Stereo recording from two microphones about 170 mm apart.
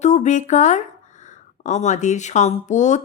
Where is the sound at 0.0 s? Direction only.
45° left (ahead or behind).